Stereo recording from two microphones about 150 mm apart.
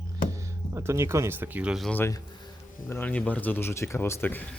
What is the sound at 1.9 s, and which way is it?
Speech, 15° left (ahead or behind).